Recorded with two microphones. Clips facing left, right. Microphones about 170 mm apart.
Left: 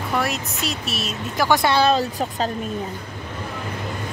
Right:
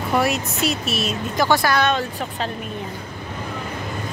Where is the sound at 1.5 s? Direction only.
25° left (ahead or behind).